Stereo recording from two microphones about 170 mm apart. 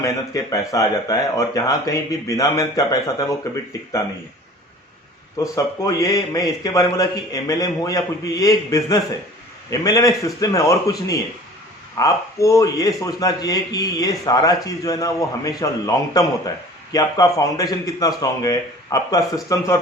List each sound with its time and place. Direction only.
0.0 s speech: 20° left (ahead or behind)
5.4 s speech: 20° left (ahead or behind)